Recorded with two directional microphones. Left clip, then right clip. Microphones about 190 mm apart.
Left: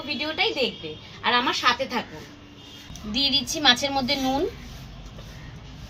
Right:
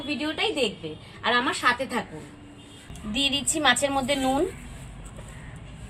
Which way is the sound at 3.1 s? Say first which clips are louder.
Left 2 dB; 20° right (ahead or behind).